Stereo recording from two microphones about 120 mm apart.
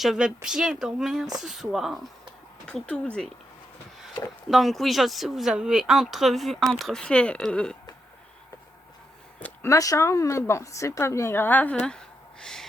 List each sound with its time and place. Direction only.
0.0 s speech: 5° right (ahead or behind)
2.6 s speech: 10° left (ahead or behind)
4.4 s speech: centre (ahead or behind)
9.6 s a woman's voice: 30° left (ahead or behind); by 12.6 s 5° left (ahead or behind)